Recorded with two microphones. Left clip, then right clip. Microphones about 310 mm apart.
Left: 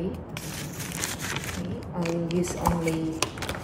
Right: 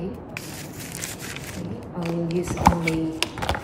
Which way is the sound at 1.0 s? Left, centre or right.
Left.